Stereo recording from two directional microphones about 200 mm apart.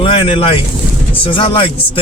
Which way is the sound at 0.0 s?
30° left (ahead or behind).